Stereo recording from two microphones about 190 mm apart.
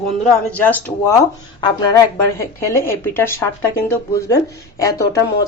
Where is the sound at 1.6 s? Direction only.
20° left (ahead or behind).